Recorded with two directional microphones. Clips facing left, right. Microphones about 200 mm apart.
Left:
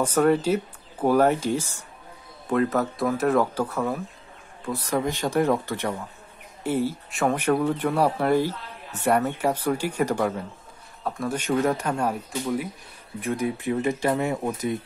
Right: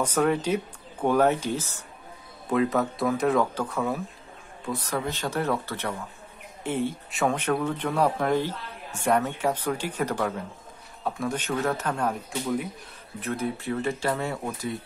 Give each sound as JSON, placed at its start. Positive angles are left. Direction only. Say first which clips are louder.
{"t": 0.0, "sound": "speech", "louder": "left 4 dB", "side_deg": 10}
{"t": 2.7, "sound": "speech", "louder": "left 1 dB", "side_deg": 0}
{"t": 11.1, "sound": "speech", "louder": "left 1 dB", "side_deg": 0}
{"t": 11.3, "sound": "speech", "louder": "left 8 dB", "side_deg": 10}